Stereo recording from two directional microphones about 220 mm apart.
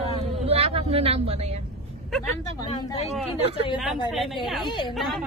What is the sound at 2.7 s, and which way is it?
Speech, 25° left (ahead or behind).